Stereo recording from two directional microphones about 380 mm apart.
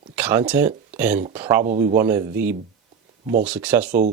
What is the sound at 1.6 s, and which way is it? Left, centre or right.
Speech, centre.